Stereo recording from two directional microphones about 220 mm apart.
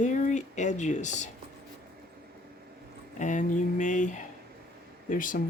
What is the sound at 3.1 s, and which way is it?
Speech, 35° left (ahead or behind).